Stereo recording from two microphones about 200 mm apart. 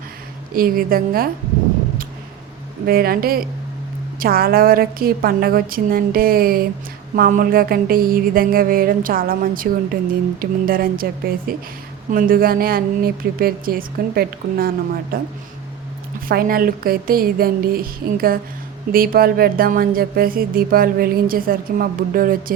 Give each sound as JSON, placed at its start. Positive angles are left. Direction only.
{"t": 0.5, "sound": "speech", "side_deg": -45}
{"t": 2.8, "sound": "speech", "side_deg": -50}
{"t": 16.3, "sound": "speech", "side_deg": -45}